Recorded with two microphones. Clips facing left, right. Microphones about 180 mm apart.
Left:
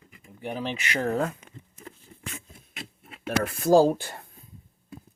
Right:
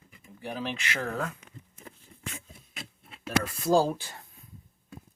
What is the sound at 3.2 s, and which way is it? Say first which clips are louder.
Speech: left 4 dB; 55° left (ahead or behind).